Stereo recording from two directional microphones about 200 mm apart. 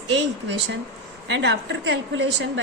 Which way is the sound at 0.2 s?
60° right (ahead or behind).